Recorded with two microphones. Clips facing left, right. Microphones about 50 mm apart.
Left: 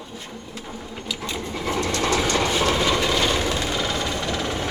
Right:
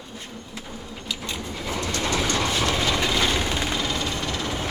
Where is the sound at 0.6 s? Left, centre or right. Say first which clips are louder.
Left 2 dB; left.